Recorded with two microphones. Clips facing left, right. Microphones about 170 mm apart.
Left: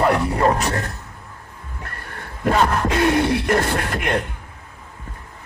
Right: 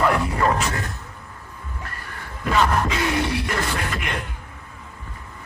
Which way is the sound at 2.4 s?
60° left (ahead or behind).